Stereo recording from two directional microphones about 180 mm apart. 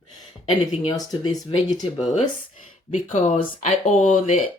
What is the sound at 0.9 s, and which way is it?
Speech, 25° left (ahead or behind).